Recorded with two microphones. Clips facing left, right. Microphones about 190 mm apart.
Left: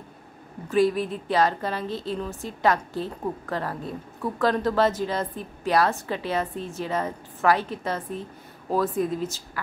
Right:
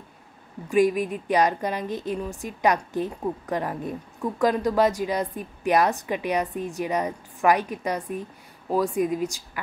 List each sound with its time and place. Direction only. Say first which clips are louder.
0.7 s a woman's voice: right 1 dB; 15° right (ahead or behind)